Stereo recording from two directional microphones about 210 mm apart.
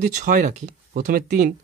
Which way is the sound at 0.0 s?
35° right (ahead or behind).